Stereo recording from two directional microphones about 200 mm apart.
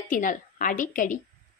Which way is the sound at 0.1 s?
40° left (ahead or behind).